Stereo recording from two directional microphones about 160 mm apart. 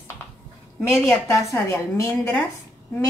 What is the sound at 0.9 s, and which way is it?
A woman's voice, 15° left (ahead or behind).